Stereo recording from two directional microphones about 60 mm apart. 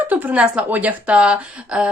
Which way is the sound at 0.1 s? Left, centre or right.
Right.